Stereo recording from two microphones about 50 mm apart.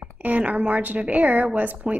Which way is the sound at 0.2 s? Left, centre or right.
Right.